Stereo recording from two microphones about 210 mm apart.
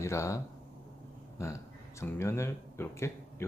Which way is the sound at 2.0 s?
15° left (ahead or behind).